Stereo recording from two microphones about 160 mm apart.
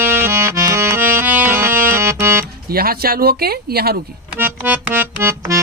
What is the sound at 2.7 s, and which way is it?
Speech, 70° right (ahead or behind).